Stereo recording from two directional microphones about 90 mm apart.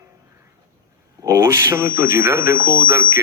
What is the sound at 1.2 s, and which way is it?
Speech, 30° right (ahead or behind).